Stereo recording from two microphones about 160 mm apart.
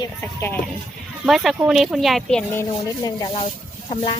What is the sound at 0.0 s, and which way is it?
Speech, 15° left (ahead or behind).